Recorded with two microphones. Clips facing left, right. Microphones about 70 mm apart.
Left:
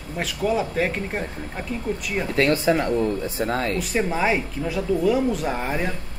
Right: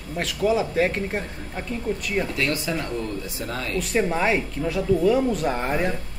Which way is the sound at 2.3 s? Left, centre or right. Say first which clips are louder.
Left 6 dB; left.